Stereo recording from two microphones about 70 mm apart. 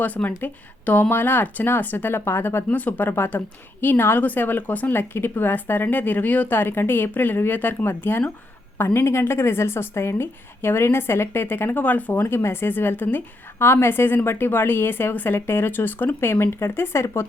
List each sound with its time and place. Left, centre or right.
0.0 s a woman's voice: left
2.6 s a woman's voice: left
12.2 s a woman's voice: left